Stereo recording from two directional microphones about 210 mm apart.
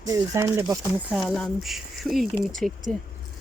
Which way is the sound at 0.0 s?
15° right (ahead or behind).